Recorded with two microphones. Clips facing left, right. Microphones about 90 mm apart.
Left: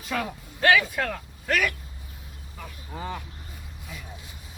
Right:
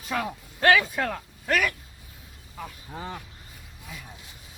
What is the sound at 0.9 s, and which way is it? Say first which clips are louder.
Speech: even; 15° right (ahead or behind).